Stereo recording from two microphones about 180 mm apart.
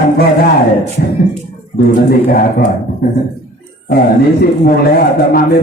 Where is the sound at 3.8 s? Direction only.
60° left (ahead or behind).